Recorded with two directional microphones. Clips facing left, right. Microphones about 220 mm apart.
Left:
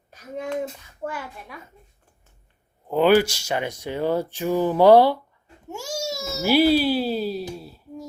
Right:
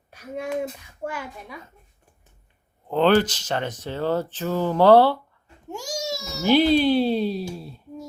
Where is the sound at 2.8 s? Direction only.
10° left (ahead or behind).